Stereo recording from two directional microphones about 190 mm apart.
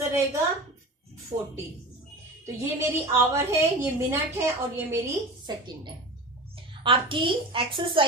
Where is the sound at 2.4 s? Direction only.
15° right (ahead or behind).